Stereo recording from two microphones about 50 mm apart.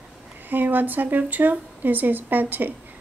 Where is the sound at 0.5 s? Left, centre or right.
Right.